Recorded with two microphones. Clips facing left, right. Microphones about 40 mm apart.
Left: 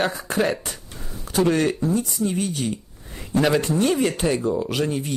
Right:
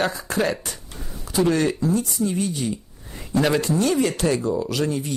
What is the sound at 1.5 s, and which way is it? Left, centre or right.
Speech, left.